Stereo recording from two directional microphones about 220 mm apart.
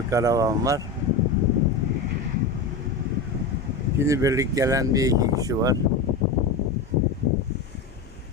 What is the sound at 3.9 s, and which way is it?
Speech, 15° right (ahead or behind).